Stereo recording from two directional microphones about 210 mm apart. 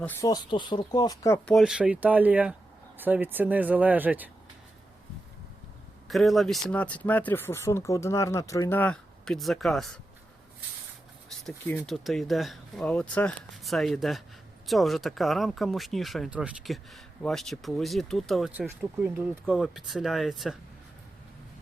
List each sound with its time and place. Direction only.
0.0 s speech: 10° left (ahead or behind)
1.5 s speech: centre (ahead or behind)
6.1 s speech: centre (ahead or behind)
11.4 s speech: 10° left (ahead or behind)